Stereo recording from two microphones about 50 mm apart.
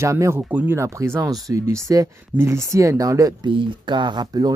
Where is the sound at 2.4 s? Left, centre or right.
Right.